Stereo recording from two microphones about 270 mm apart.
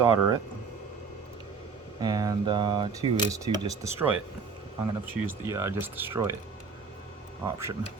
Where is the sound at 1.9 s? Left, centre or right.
Centre.